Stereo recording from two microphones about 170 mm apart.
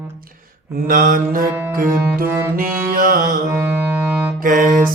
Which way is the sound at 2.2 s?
10° right (ahead or behind).